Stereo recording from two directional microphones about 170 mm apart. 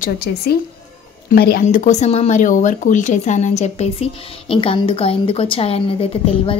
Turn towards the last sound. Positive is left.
turn(degrees=35)  # may be behind; listen again after turning